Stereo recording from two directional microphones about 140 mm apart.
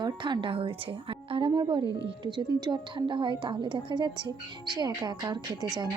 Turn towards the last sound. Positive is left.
turn(degrees=-30)  # may be behind; listen again after turning